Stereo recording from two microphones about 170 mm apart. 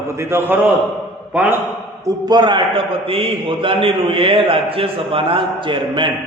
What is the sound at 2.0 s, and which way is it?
A man's voice, 25° right (ahead or behind).